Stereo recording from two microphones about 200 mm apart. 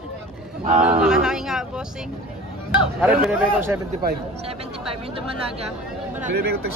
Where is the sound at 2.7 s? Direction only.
10° right (ahead or behind).